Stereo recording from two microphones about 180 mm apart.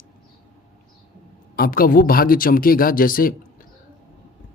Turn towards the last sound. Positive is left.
turn(degrees=50)  # may be behind; listen again after turning